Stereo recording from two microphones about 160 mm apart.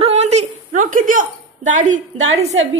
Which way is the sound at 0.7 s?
55° right (ahead or behind).